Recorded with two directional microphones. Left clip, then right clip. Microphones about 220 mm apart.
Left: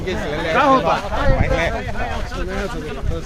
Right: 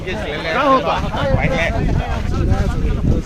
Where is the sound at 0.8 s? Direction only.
Centre (ahead or behind).